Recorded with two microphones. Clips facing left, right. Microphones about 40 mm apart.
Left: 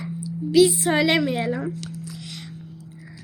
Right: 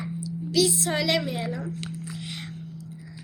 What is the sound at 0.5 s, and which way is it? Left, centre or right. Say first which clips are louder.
A woman's voice: left 7 dB; left.